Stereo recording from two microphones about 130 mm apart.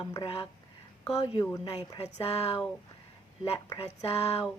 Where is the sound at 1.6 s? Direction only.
50° left (ahead or behind).